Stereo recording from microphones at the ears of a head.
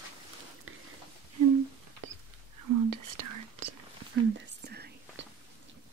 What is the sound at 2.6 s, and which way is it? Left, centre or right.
Whispering, right.